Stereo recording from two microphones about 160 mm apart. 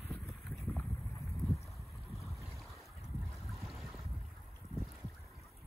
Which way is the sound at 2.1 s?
Centre (ahead or behind).